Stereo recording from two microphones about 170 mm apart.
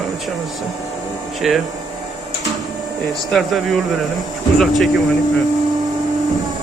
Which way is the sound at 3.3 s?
Centre (ahead or behind).